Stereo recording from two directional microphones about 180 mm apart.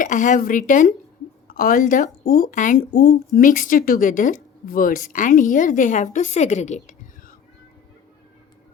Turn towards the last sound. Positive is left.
turn(degrees=45)  # may be behind; listen again after turning